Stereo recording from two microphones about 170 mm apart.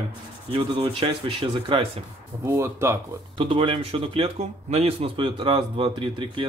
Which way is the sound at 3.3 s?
30° right (ahead or behind).